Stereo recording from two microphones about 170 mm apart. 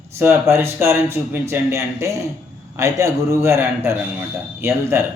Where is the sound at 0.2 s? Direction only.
15° right (ahead or behind).